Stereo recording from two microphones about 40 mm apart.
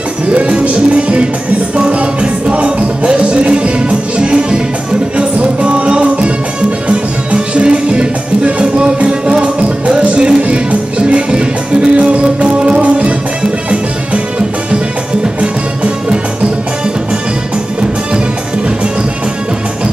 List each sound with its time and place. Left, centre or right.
0.3 s music: right
15.2 s music: right